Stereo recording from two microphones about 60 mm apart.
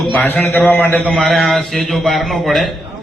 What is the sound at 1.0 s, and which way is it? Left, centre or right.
A man's voice, centre.